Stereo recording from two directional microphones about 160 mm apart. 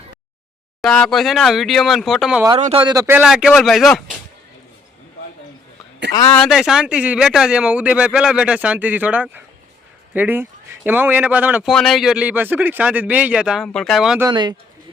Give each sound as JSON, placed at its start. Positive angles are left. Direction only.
{"t": 0.8, "sound": "a man's voice", "side_deg": 5}
{"t": 2.6, "sound": "a man's voice", "side_deg": -45}
{"t": 2.8, "sound": "speech", "side_deg": -20}
{"t": 3.2, "sound": "a man's voice", "side_deg": -5}
{"t": 6.1, "sound": "speech", "side_deg": 20}
{"t": 6.4, "sound": "speech", "side_deg": 0}
{"t": 11.7, "sound": "a man's voice", "side_deg": 0}
{"t": 14.2, "sound": "speech", "side_deg": -25}